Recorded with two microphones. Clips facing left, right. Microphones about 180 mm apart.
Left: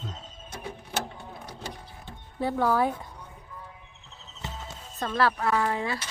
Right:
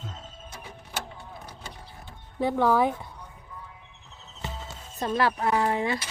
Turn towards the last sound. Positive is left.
turn(degrees=-25)  # may be behind; listen again after turning